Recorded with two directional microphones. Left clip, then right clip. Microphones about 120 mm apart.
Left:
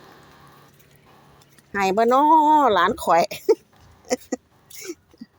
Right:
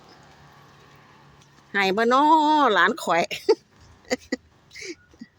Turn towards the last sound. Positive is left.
turn(degrees=0)  # may be behind; listen again after turning